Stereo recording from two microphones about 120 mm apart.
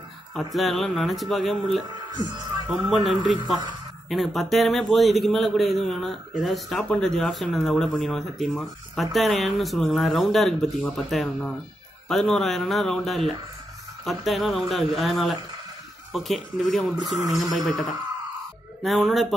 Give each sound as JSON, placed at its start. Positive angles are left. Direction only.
{"t": 0.3, "sound": "a man's voice", "side_deg": 0}
{"t": 2.0, "sound": "speech", "side_deg": -35}
{"t": 2.7, "sound": "a man's voice", "side_deg": 0}